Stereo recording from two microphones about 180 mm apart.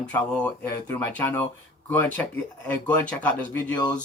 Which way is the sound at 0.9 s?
10° left (ahead or behind).